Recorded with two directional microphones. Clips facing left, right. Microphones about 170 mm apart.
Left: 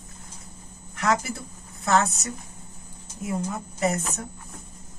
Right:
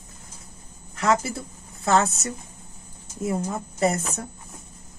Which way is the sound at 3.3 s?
35° right (ahead or behind).